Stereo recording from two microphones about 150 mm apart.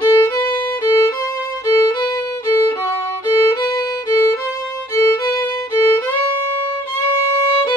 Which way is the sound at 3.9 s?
20° left (ahead or behind).